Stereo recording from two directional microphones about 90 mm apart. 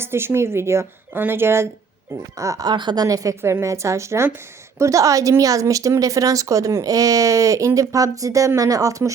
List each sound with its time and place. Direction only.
0.0 s a woman's voice: 25° right (ahead or behind)
2.3 s speech: 35° right (ahead or behind)
2.6 s speech: 55° right (ahead or behind); by 9.1 s 35° right (ahead or behind)